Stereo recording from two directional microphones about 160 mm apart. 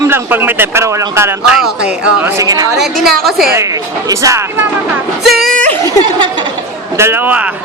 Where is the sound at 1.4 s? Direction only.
5° right (ahead or behind); by 2.7 s 20° right (ahead or behind).